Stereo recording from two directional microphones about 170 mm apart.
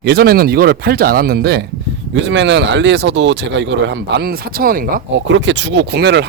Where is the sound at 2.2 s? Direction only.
90° right.